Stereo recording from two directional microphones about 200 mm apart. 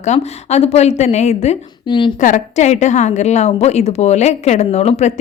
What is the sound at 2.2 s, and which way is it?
A woman's voice, 35° left (ahead or behind).